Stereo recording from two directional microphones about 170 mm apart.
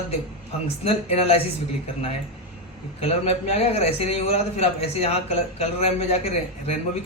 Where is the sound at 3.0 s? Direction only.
35° left (ahead or behind).